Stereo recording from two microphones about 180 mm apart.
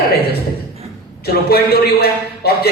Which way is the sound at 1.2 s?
60° left (ahead or behind).